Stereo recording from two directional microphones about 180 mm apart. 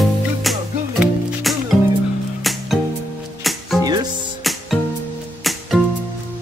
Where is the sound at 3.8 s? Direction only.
20° right (ahead or behind).